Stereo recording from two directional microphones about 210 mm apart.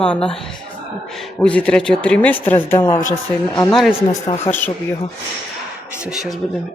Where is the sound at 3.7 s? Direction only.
Centre (ahead or behind).